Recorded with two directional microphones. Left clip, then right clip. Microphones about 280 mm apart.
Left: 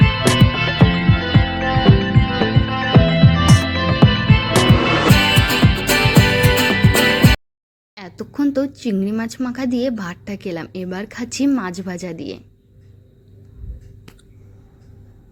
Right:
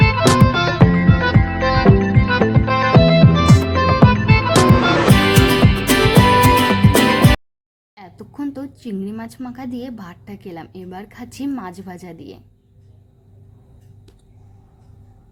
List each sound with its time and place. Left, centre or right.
0.2 s music: centre
7.9 s speech: centre